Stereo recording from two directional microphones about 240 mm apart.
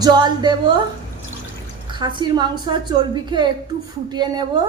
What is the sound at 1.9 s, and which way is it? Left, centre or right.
A woman's voice, centre.